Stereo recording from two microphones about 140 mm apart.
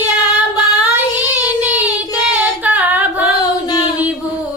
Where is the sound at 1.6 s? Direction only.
10° right (ahead or behind).